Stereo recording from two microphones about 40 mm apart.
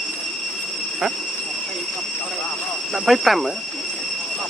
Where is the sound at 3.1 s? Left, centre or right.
Centre.